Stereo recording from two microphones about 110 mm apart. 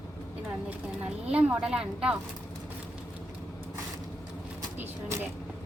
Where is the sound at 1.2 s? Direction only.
10° right (ahead or behind).